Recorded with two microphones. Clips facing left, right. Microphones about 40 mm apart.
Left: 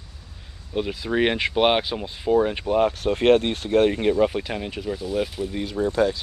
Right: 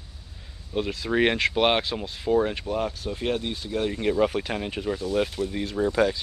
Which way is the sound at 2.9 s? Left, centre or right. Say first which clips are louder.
Left 10 dB; left.